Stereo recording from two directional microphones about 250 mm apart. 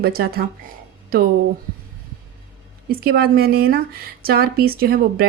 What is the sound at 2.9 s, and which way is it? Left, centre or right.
Speech, right.